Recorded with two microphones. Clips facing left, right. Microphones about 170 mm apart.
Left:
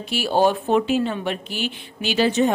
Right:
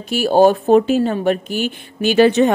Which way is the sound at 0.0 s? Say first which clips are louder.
Right 7 dB; 45° right (ahead or behind).